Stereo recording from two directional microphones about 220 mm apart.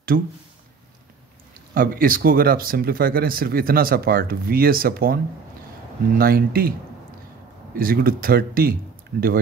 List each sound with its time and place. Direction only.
0.1 s speech: 50° right (ahead or behind)
1.7 s speech: 40° right (ahead or behind)
7.7 s speech: 40° right (ahead or behind)